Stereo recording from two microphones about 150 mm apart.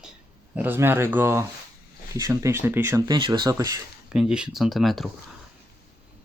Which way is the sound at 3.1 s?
30° right (ahead or behind).